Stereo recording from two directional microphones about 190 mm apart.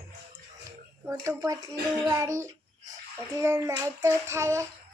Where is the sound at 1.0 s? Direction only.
15° right (ahead or behind).